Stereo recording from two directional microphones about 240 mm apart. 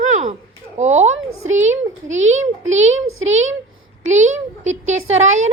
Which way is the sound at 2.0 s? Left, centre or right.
Right.